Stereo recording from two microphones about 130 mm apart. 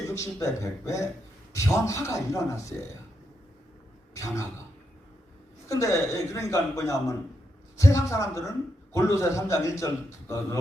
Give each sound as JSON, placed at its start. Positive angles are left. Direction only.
{"t": 0.1, "sound": "a man's voice", "side_deg": 20}
{"t": 4.1, "sound": "a man's voice", "side_deg": 25}
{"t": 5.6, "sound": "a man's voice", "side_deg": 25}